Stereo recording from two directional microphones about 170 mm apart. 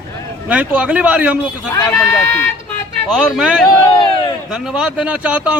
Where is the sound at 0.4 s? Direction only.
10° right (ahead or behind).